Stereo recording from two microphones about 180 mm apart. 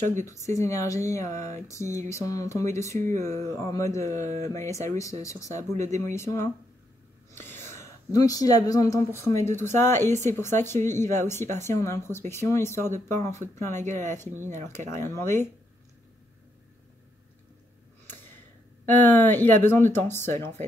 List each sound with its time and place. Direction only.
0.0 s speech: 40° right (ahead or behind)
0.6 s speech: 15° left (ahead or behind)
4.2 s speech: 40° right (ahead or behind)
4.6 s speech: 15° left (ahead or behind)
7.3 s gasp: 10° left (ahead or behind)
8.1 s speech: 20° left (ahead or behind)
10.0 s speech: 40° right (ahead or behind)
10.3 s speech: 15° left (ahead or behind)
13.8 s speech: 45° right (ahead or behind)
15.0 s speech: 15° left (ahead or behind)
18.9 s speech: 10° left (ahead or behind)